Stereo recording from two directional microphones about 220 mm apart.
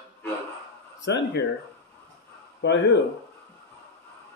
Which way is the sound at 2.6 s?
55° left (ahead or behind).